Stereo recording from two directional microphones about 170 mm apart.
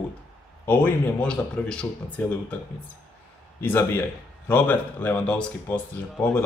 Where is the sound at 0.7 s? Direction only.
10° left (ahead or behind).